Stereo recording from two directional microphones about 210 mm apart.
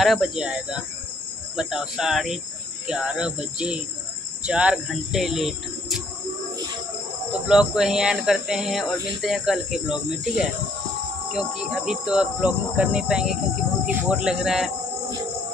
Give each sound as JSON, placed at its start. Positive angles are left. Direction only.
{"t": 0.0, "sound": "cricket", "side_deg": 0}
{"t": 7.4, "sound": "cricket", "side_deg": -5}